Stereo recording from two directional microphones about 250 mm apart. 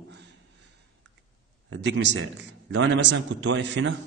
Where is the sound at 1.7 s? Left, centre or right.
Right.